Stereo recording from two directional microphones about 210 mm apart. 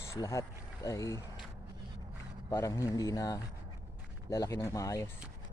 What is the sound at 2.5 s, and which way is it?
Speech, 15° left (ahead or behind).